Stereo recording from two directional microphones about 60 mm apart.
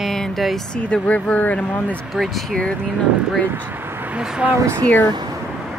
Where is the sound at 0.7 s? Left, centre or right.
Centre.